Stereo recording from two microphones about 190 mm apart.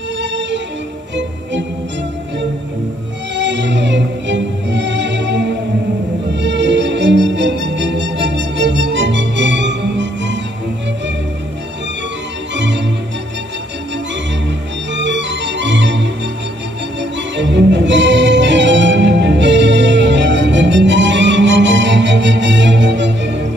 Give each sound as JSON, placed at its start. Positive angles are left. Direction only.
{"t": 0.2, "sound": "music", "side_deg": -70}
{"t": 3.3, "sound": "music", "side_deg": -70}
{"t": 12.5, "sound": "music", "side_deg": -70}
{"t": 15.0, "sound": "organ", "side_deg": -70}
{"t": 17.4, "sound": "music", "side_deg": -70}